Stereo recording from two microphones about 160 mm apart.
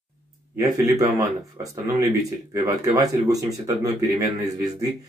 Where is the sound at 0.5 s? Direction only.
20° right (ahead or behind).